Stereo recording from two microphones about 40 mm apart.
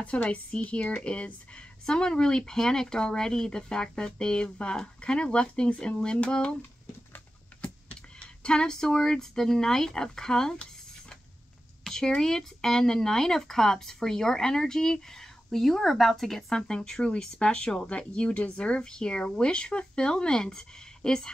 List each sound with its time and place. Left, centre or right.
0.0 s speech: left
7.6 s speech: left
11.8 s a sound: centre
12.2 s speech: centre; by 18.8 s left
18.8 s speech: centre